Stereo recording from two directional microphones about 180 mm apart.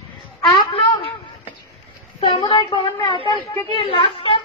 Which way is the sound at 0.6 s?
30° left (ahead or behind).